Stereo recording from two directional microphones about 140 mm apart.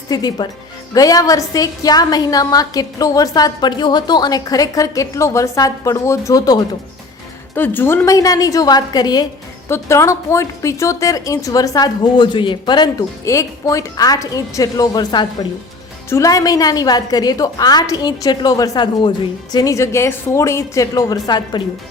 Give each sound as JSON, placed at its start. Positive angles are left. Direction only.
{"t": 0.1, "sound": "a woman's voice", "side_deg": 30}
{"t": 7.5, "sound": "a woman's voice", "side_deg": 15}
{"t": 9.6, "sound": "a woman's voice", "side_deg": 20}